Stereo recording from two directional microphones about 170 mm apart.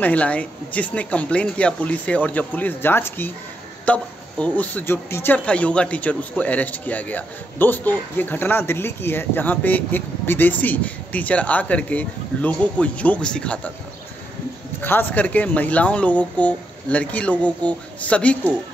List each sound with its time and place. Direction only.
0.0 s speech: 10° left (ahead or behind)
14.8 s speech: 10° left (ahead or behind)